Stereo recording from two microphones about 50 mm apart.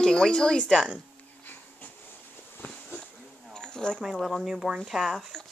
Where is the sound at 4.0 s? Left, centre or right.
Centre.